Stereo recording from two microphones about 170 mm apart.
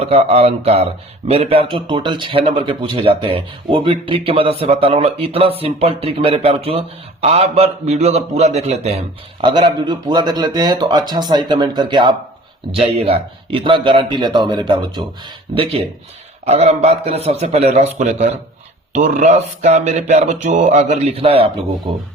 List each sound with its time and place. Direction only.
0.0 s a man's voice: 35° right (ahead or behind)